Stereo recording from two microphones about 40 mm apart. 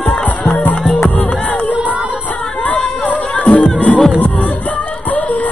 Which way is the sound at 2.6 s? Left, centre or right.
Left.